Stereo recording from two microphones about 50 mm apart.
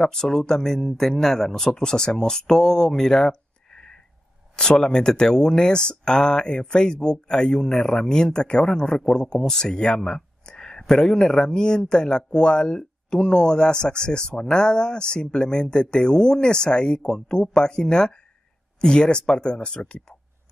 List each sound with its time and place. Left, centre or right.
0.0 s speech: centre